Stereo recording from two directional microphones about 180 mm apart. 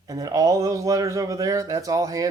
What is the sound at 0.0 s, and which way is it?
Speech, 20° right (ahead or behind).